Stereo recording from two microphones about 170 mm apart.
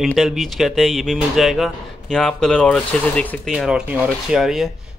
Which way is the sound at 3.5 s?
5° right (ahead or behind).